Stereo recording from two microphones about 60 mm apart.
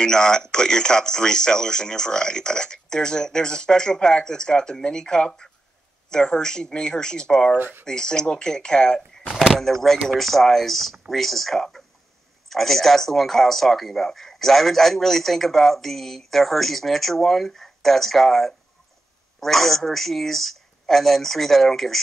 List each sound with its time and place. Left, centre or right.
0.0 s speech: centre
7.5 s speech: right
7.8 s speech: centre